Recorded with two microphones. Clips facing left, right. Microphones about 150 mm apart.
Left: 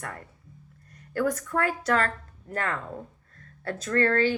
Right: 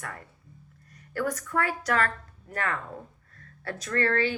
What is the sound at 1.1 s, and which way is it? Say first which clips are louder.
Speech: left 2 dB; 25° left (ahead or behind).